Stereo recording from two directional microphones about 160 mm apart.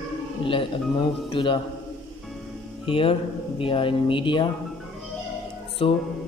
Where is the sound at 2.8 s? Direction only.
35° left (ahead or behind).